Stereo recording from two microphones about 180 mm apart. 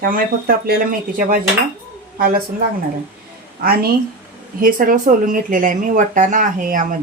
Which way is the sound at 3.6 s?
55° right (ahead or behind).